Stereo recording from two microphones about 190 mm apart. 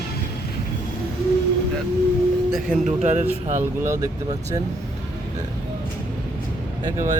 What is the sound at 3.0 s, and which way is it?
Speech, 40° right (ahead or behind).